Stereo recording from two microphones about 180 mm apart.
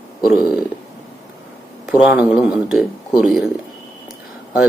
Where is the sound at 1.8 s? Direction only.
10° right (ahead or behind).